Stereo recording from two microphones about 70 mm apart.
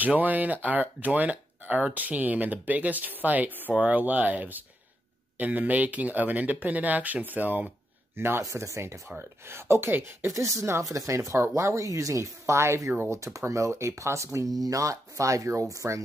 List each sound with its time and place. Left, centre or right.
0.0 s speech: right
8.4 s speech: right
12.9 s speech: right
13.2 s speech: right
14.5 s speech: right